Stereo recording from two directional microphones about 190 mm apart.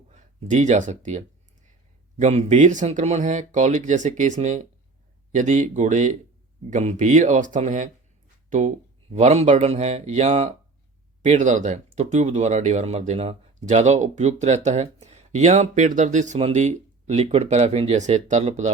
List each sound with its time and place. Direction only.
0.1 s speech: 40° right (ahead or behind)